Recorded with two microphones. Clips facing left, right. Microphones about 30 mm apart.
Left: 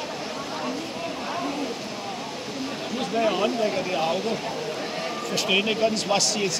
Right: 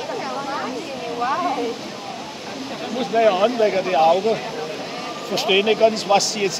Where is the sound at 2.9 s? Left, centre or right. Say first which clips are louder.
Right 7 dB; centre.